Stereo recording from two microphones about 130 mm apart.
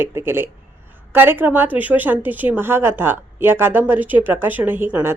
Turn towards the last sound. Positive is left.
turn(degrees=-15)  # may be behind; listen again after turning